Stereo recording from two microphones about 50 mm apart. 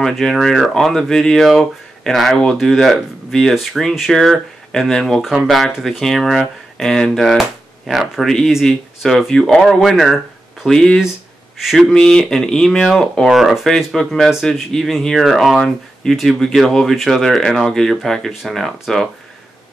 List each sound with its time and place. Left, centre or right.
0.0 s speech: centre
4.1 s speech: centre
7.1 s speech: centre
11.9 s speech: centre
13.3 s speech: centre
13.9 s speech: centre